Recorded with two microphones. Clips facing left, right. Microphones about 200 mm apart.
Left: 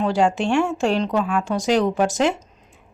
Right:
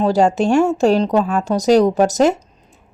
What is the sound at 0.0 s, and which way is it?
Speech, 40° right (ahead or behind).